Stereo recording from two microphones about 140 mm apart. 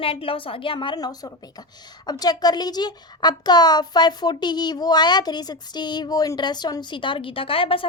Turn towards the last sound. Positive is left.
turn(degrees=40)  # may be behind; listen again after turning